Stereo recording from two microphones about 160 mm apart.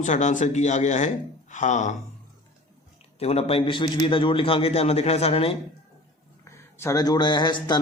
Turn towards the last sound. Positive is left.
turn(degrees=30)  # may be behind; listen again after turning